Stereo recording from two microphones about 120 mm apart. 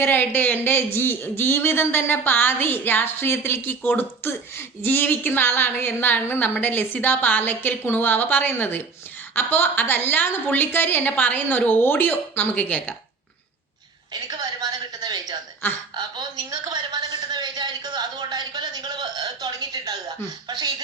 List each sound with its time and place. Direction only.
0.0 s speech: 15° left (ahead or behind)
14.1 s a woman's voice: 35° right (ahead or behind)